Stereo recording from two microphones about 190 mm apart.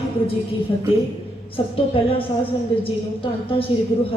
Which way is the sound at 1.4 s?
30° left (ahead or behind).